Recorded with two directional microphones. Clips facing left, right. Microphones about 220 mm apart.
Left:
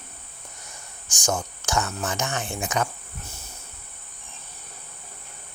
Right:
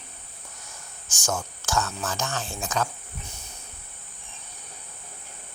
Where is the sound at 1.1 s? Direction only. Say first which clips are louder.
Left 3 dB; 15° left (ahead or behind).